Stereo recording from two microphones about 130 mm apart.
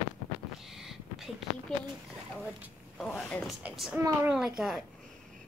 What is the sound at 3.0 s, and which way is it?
Speech, 15° left (ahead or behind).